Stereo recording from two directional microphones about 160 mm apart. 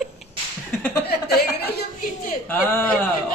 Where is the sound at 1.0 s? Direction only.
90° left.